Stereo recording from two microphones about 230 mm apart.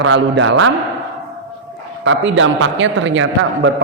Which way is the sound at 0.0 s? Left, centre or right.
Right.